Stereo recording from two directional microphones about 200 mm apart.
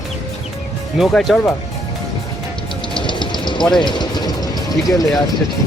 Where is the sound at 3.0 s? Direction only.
25° left (ahead or behind).